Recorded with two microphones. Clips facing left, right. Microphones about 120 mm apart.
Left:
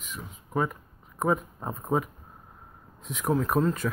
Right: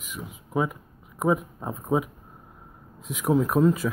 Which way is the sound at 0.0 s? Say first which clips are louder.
Right 3 dB; 10° right (ahead or behind).